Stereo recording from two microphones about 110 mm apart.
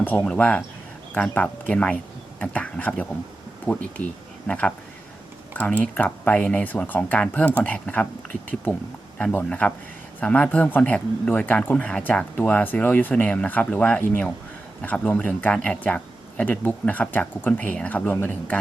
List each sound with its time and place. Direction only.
0.0 s speech: 15° left (ahead or behind)